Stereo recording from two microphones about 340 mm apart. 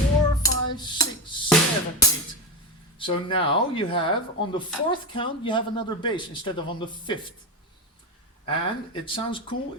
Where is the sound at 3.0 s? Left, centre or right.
Centre.